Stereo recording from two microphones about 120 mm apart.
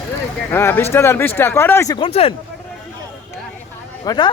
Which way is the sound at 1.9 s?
50° left (ahead or behind).